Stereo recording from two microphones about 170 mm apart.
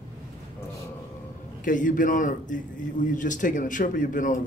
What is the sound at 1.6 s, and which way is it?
A man's voice, 50° left (ahead or behind).